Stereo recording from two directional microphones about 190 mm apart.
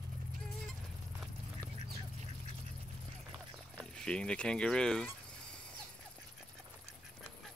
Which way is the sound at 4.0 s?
5° left (ahead or behind).